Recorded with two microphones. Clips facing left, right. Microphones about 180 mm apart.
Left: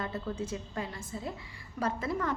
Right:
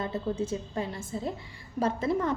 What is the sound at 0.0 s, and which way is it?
A woman's voice, 25° right (ahead or behind).